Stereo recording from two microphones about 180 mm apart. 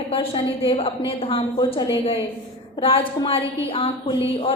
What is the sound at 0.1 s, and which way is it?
A woman's voice, 30° left (ahead or behind).